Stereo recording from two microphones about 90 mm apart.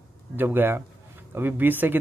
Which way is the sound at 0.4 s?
25° right (ahead or behind).